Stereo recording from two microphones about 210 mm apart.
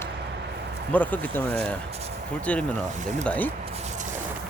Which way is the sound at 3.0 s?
35° right (ahead or behind).